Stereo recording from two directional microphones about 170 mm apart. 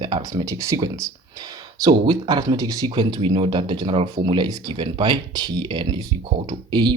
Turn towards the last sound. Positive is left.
turn(degrees=-25)  # may be behind; listen again after turning